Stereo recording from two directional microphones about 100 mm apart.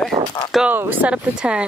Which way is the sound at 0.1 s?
35° right (ahead or behind).